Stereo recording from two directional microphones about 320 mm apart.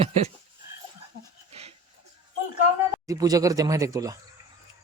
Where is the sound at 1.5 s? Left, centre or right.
Centre.